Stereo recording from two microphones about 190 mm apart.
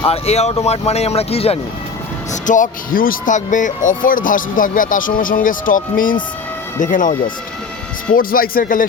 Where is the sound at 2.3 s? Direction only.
45° left (ahead or behind).